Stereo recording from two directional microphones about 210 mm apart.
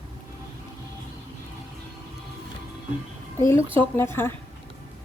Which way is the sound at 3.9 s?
10° left (ahead or behind).